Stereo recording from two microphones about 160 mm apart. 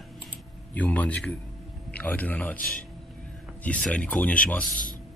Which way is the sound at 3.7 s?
5° left (ahead or behind).